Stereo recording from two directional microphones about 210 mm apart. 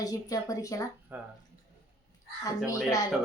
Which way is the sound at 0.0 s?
15° left (ahead or behind).